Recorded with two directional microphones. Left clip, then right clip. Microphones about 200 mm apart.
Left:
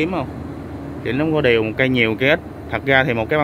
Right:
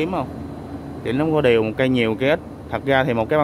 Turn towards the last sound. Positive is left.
turn(degrees=-10)  # may be behind; listen again after turning